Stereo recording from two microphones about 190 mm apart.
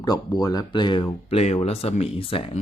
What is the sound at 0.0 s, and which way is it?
Speech, 20° left (ahead or behind).